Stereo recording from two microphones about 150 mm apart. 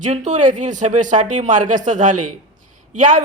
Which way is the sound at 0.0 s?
55° right (ahead or behind).